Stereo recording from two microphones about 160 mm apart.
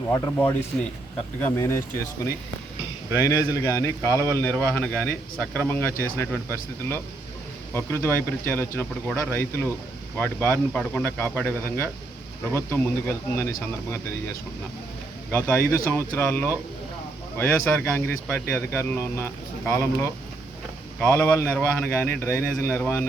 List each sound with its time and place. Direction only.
0.1 s a man's voice: 20° left (ahead or behind)
3.2 s a man's voice: 20° left (ahead or behind)
4.1 s speech: 20° right (ahead or behind)
4.4 s speech: 10° left (ahead or behind)
15.3 s speech: 15° left (ahead or behind)